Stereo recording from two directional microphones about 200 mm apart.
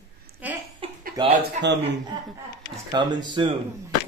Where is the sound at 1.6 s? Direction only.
35° right (ahead or behind).